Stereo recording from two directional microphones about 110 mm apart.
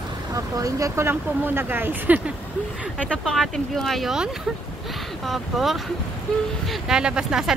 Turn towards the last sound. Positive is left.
turn(degrees=-5)  # may be behind; listen again after turning